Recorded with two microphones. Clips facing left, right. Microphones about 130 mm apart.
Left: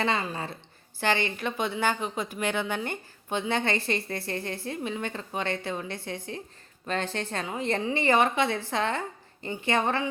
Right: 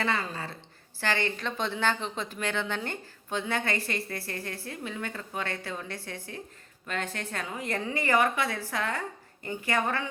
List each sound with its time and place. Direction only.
0.0 s speech: 20° left (ahead or behind)